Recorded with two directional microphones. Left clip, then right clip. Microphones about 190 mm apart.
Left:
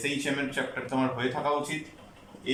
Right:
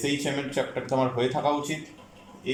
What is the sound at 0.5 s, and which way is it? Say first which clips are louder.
Speech: right 4 dB; 25° right (ahead or behind).